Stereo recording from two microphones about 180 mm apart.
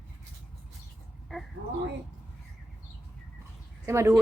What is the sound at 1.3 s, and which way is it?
Speech, centre (ahead or behind).